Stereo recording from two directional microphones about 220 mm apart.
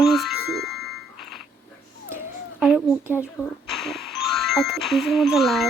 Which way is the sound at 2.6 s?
5° right (ahead or behind).